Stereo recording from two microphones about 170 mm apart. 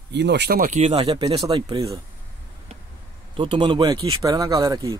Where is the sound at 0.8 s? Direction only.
30° right (ahead or behind).